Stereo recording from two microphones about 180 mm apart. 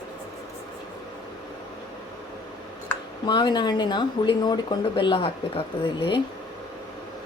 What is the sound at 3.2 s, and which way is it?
Speech, 25° left (ahead or behind).